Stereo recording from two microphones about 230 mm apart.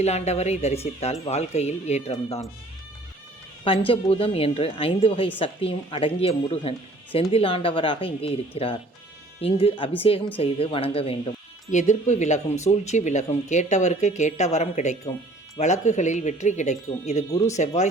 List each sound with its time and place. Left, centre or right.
0.0 s speech: left
3.6 s speech: left